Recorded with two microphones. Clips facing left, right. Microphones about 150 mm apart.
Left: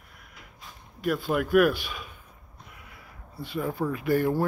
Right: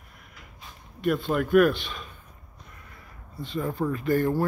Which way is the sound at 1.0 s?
5° left (ahead or behind).